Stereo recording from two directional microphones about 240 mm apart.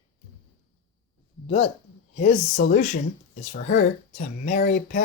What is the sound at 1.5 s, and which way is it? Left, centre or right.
A woman's voice, left.